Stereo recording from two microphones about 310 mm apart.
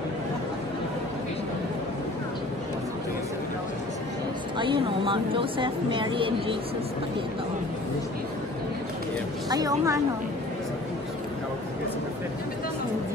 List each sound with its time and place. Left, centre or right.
4.6 s speech: centre
9.5 s speech: centre